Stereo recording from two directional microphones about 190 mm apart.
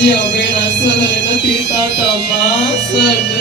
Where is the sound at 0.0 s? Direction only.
65° left (ahead or behind).